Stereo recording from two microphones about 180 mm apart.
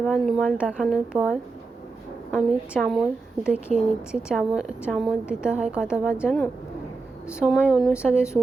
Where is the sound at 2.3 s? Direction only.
Centre (ahead or behind).